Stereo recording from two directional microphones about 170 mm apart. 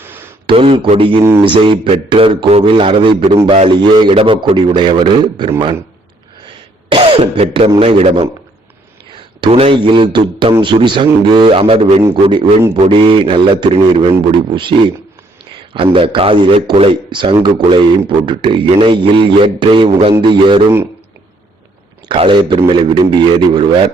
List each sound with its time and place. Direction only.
0.0 s a sound: 15° right (ahead or behind)
0.4 s a man's voice: 35° right (ahead or behind)
6.9 s a man's voice: 35° right (ahead or behind)
9.4 s a man's voice: 35° right (ahead or behind)
22.1 s a man's voice: 30° right (ahead or behind)